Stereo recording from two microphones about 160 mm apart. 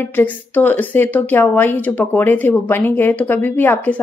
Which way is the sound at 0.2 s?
10° left (ahead or behind).